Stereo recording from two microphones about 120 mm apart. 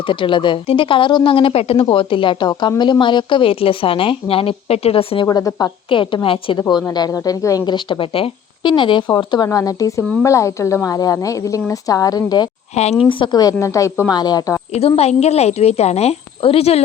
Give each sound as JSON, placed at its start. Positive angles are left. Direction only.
{"t": 0.1, "sound": "speech", "side_deg": 45}
{"t": 5.2, "sound": "a woman's voice", "side_deg": 30}
{"t": 12.7, "sound": "a woman's voice", "side_deg": 65}
{"t": 13.1, "sound": "a woman's voice", "side_deg": 45}
{"t": 14.1, "sound": "a woman's voice", "side_deg": 35}
{"t": 14.7, "sound": "a woman's voice", "side_deg": 60}